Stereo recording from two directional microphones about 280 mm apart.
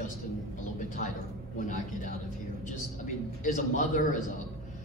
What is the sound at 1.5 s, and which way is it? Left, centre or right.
Speech, left.